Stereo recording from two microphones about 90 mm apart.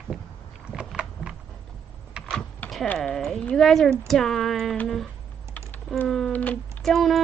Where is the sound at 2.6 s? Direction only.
15° left (ahead or behind).